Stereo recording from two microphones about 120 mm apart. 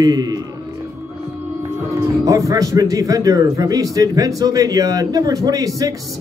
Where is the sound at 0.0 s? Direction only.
30° right (ahead or behind).